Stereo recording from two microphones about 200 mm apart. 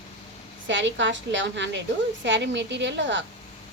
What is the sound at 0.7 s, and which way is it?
A woman's voice, 65° right (ahead or behind).